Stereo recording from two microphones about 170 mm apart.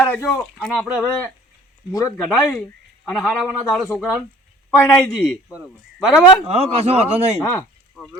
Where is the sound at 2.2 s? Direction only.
Centre (ahead or behind).